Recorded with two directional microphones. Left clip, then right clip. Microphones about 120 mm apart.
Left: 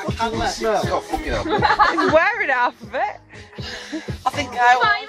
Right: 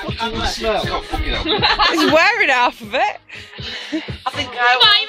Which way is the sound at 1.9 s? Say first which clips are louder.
Right 3 dB; 25° right (ahead or behind).